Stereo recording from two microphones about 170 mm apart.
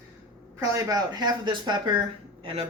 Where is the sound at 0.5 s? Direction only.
20° right (ahead or behind).